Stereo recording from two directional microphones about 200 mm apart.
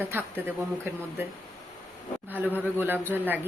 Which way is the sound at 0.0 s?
10° right (ahead or behind).